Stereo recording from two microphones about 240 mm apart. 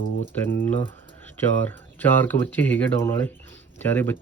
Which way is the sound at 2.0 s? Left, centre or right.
Centre.